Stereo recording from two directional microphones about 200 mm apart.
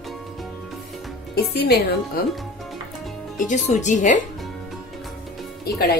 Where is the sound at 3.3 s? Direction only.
40° left (ahead or behind).